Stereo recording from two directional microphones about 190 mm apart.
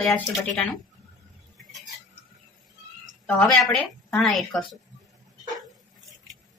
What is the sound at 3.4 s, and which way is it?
A woman's voice, centre (ahead or behind).